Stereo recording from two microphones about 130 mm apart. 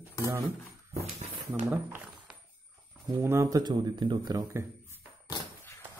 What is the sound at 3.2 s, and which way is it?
Speech, 20° right (ahead or behind).